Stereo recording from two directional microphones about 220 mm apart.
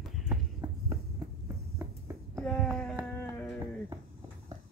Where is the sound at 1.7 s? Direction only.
10° right (ahead or behind).